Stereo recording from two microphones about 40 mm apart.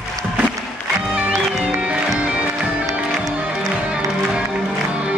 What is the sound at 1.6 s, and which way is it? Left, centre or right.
Music, right.